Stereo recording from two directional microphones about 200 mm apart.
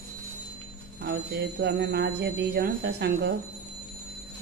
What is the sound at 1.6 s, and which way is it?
Speech, 55° right (ahead or behind).